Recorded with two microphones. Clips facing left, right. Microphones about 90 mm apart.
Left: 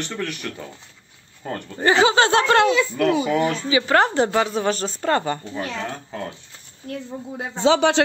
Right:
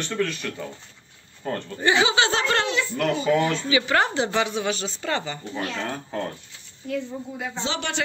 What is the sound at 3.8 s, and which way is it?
Speech, 40° left (ahead or behind).